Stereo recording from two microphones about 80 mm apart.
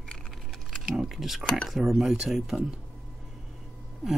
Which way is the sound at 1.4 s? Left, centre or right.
Centre.